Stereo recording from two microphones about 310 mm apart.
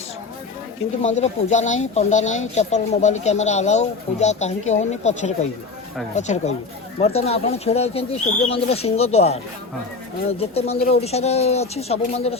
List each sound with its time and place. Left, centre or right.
1.0 s speech: left